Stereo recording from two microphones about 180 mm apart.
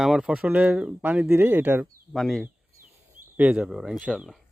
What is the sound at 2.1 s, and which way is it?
Speech, centre (ahead or behind).